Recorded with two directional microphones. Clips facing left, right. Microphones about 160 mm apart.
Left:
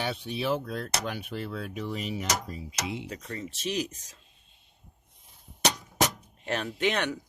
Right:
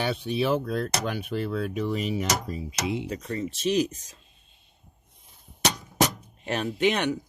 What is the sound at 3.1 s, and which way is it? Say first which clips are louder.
Speech: right 7 dB; 30° right (ahead or behind).